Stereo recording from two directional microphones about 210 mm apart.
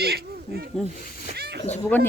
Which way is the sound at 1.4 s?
50° right (ahead or behind).